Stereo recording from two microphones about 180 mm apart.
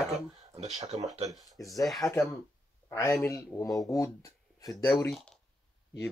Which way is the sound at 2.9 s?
15° left (ahead or behind).